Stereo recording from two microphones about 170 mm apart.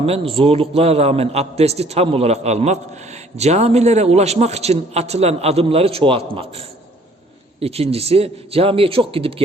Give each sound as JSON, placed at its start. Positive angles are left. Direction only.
{"t": 0.0, "sound": "a man's voice", "side_deg": -35}